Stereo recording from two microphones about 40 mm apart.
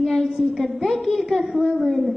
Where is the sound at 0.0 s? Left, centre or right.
Centre.